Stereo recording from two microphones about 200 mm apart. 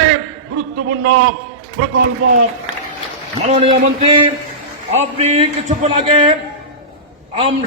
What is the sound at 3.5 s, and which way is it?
Speech, 30° right (ahead or behind).